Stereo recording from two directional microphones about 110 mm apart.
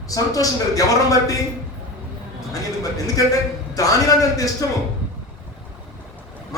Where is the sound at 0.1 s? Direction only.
30° left (ahead or behind).